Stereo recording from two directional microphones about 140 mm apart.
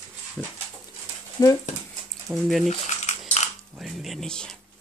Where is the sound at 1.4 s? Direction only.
25° left (ahead or behind).